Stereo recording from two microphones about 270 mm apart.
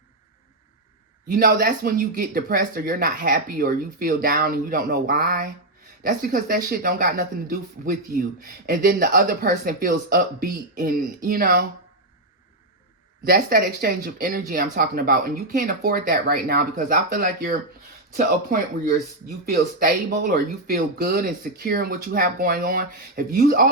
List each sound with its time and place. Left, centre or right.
1.3 s speech: right
13.2 s speech: right
19.5 s speech: right